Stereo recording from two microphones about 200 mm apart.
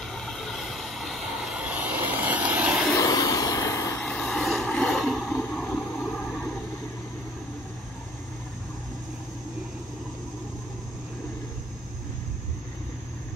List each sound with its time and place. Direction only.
0.0 s train: centre (ahead or behind)
2.9 s vehicle: 20° left (ahead or behind)
4.0 s vehicle: 5° left (ahead or behind)